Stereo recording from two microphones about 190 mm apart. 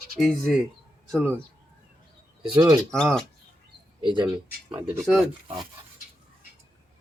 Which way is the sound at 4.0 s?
25° right (ahead or behind).